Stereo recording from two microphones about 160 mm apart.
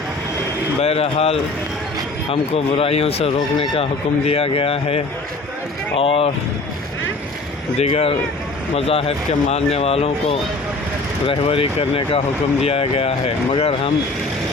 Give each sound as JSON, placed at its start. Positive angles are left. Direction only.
{"t": 0.8, "sound": "speech", "side_deg": 40}
{"t": 7.8, "sound": "speech", "side_deg": 40}